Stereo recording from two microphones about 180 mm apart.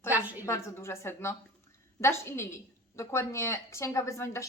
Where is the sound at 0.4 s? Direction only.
15° left (ahead or behind).